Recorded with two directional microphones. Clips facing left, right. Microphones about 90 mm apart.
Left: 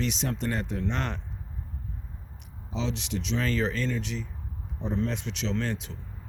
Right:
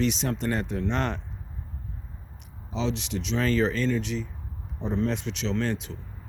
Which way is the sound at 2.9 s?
10° left (ahead or behind).